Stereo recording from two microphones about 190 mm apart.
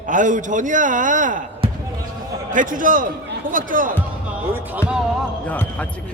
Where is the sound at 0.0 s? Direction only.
45° right (ahead or behind).